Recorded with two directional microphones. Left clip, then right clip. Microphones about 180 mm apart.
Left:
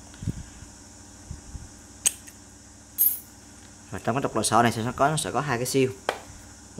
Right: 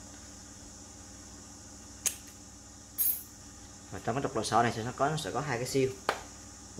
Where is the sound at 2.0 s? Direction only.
25° left (ahead or behind).